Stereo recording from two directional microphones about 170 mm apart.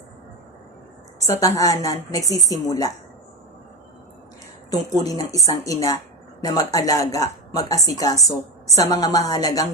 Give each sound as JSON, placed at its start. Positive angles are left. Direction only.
{"t": 1.2, "sound": "a woman's voice", "side_deg": 20}
{"t": 4.7, "sound": "a woman's voice", "side_deg": 20}